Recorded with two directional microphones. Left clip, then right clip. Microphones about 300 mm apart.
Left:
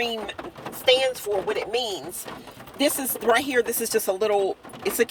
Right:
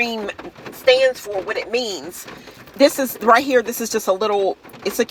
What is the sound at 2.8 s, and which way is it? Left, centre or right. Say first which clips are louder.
Speech: right 9 dB; centre.